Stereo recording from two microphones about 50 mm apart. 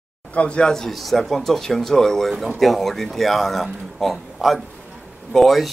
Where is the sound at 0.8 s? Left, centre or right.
Centre.